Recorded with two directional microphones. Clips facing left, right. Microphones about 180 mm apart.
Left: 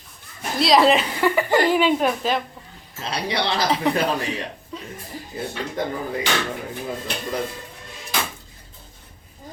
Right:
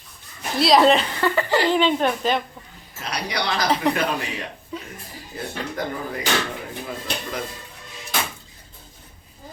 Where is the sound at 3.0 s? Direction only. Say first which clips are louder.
Left 2 dB; 25° left (ahead or behind).